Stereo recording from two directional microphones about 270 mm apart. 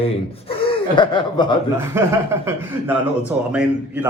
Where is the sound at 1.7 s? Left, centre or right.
Centre.